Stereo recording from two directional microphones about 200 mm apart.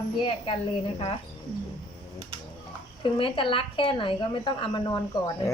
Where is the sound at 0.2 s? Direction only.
25° left (ahead or behind).